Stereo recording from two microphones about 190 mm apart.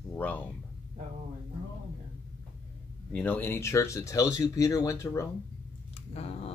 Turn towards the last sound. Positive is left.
turn(degrees=30)  # may be behind; listen again after turning